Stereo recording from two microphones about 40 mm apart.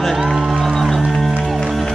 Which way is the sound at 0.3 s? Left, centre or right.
Centre.